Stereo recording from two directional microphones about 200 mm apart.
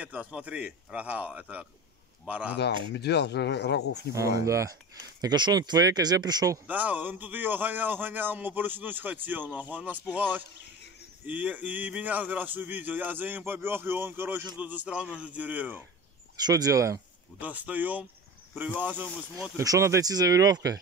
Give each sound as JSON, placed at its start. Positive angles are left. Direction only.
{"t": 0.0, "sound": "speech", "side_deg": -5}
{"t": 2.5, "sound": "speech", "side_deg": 55}
{"t": 4.1, "sound": "speech", "side_deg": -15}
{"t": 16.4, "sound": "speech", "side_deg": -20}